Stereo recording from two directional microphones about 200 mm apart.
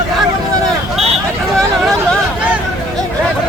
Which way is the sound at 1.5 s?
Centre (ahead or behind).